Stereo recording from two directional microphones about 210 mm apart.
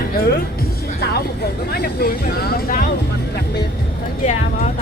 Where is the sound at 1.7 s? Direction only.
45° left (ahead or behind).